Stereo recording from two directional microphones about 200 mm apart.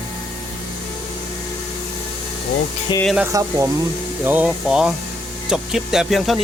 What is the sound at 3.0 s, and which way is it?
Speech, 5° right (ahead or behind).